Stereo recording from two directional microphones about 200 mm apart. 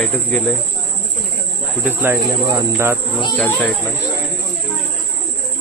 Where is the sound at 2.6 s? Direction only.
10° right (ahead or behind).